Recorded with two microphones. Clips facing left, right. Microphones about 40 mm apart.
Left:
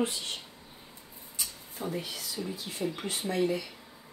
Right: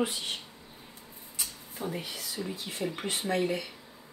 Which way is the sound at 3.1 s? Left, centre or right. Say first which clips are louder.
Even; right.